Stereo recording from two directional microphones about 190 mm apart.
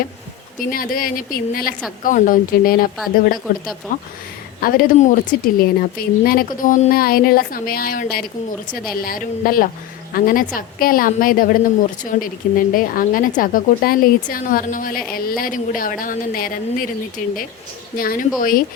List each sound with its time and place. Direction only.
0.6 s speech: 50° left (ahead or behind)
4.6 s speech: 45° left (ahead or behind)